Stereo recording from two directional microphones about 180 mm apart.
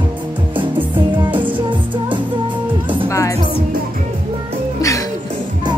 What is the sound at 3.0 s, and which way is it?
Music, 20° left (ahead or behind).